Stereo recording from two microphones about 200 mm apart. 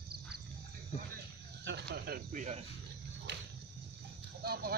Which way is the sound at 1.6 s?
55° right (ahead or behind).